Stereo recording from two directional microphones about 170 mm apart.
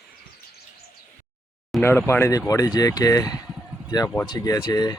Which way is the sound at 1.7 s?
10° left (ahead or behind).